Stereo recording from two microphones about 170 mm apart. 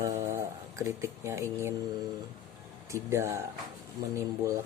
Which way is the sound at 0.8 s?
15° right (ahead or behind).